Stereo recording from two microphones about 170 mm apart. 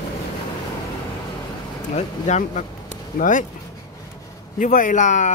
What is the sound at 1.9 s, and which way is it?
Speech, 45° left (ahead or behind).